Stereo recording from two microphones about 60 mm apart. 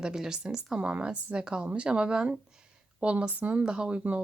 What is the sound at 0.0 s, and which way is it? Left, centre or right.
A woman's voice, centre.